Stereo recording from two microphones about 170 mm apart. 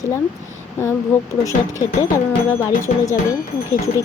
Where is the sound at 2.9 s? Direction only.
50° left (ahead or behind).